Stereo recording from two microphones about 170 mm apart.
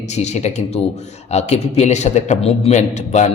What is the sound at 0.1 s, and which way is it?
A man's voice, 40° left (ahead or behind).